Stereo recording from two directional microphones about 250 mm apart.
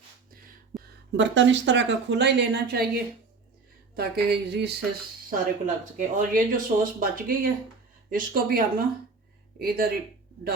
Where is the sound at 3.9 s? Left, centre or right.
Right.